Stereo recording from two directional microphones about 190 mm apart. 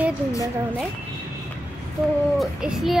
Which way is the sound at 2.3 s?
Centre (ahead or behind).